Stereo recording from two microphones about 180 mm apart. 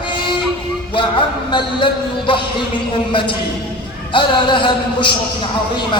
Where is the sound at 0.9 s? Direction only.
25° left (ahead or behind).